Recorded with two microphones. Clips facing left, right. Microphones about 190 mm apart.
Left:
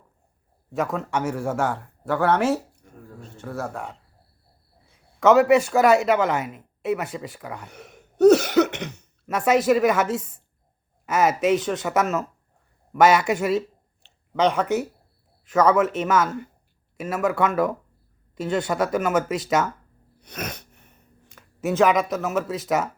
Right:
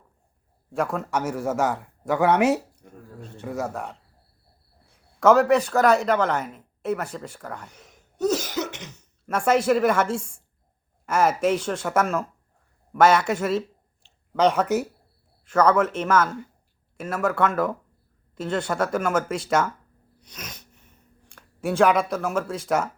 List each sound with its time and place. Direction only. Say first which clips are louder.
0.9 s speech: left 1 dB; centre (ahead or behind)
7.7 s cough: left 8 dB; 65° left (ahead or behind)
9.2 s speech: left 1 dB; 5° left (ahead or behind)
20.2 s sneeze: left 9 dB; 60° left (ahead or behind)
21.3 s speech: left 1 dB; 5° left (ahead or behind)